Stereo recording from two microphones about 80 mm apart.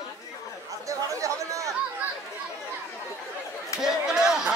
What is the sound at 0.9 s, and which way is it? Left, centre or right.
Chatter, right.